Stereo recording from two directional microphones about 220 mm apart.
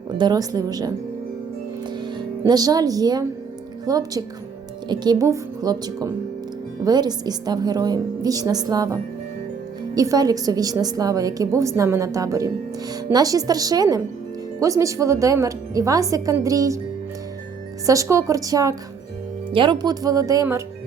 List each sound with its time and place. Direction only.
0.2 s a woman's voice: 15° right (ahead or behind)
1.9 s music: 20° right (ahead or behind)
3.8 s a woman's voice: 15° right (ahead or behind)
17.8 s a woman's voice: 15° right (ahead or behind)